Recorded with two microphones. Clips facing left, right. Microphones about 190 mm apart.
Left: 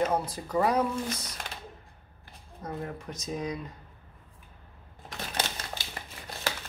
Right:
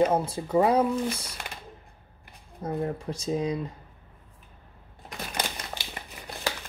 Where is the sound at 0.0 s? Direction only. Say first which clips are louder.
Right 5 dB; 25° right (ahead or behind).